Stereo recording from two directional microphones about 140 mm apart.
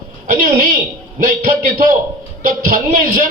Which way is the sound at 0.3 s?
70° right (ahead or behind).